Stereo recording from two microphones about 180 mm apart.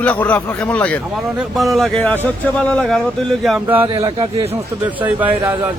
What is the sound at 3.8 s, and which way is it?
Speech, 25° right (ahead or behind).